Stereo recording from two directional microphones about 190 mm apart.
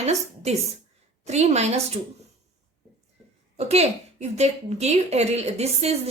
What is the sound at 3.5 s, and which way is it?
A woman's voice, 35° right (ahead or behind).